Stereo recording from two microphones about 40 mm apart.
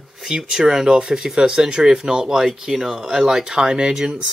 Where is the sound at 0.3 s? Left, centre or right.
Centre.